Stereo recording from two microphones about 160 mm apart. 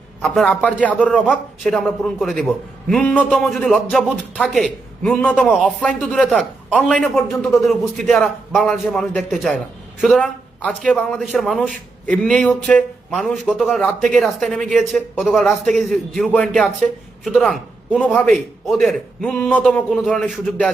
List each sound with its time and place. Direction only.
0.2 s a man's voice: 5° left (ahead or behind)